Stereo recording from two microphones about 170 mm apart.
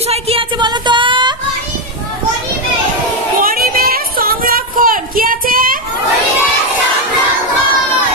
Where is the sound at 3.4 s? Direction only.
60° right (ahead or behind).